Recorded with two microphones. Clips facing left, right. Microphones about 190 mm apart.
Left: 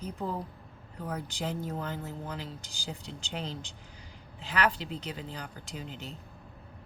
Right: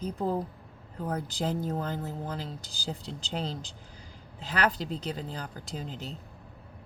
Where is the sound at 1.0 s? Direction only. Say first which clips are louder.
Right 4 dB; 35° right (ahead or behind).